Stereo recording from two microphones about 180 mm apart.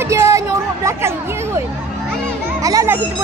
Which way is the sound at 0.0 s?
15° right (ahead or behind).